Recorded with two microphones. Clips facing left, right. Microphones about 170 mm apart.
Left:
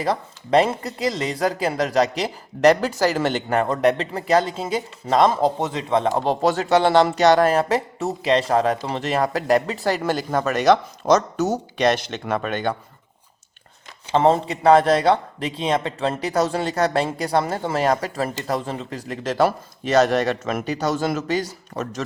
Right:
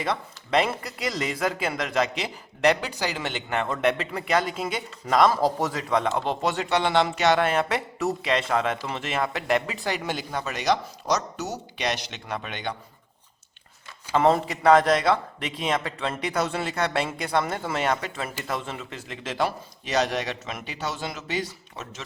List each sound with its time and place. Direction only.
0.0 s speech: 35° left (ahead or behind)
14.1 s speech: 30° left (ahead or behind)